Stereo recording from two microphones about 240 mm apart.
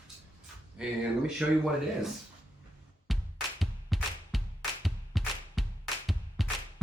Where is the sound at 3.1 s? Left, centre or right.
Centre.